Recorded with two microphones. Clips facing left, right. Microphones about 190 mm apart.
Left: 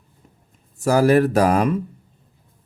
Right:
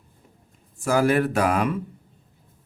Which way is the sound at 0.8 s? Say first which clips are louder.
Left 5 dB; 40° left (ahead or behind).